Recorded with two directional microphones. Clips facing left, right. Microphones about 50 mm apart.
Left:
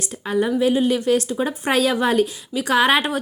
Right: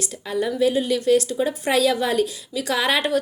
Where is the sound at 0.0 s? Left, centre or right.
Left.